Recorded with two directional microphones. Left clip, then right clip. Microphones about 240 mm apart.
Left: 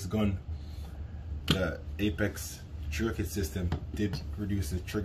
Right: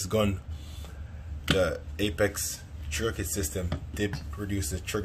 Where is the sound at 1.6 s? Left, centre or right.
Right.